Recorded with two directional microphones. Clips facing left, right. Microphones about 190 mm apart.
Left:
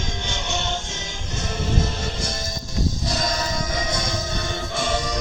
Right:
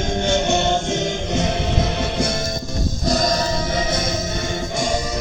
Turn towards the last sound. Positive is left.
turn(degrees=-40)  # may be behind; listen again after turning